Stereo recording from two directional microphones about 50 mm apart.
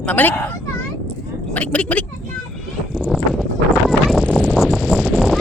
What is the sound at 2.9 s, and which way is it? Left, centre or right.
Clip-clop, centre.